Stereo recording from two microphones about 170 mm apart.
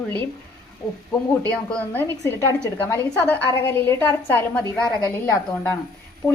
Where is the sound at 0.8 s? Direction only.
20° left (ahead or behind).